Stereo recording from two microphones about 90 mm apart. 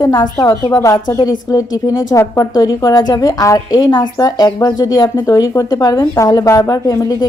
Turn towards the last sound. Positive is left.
turn(degrees=45)  # may be behind; listen again after turning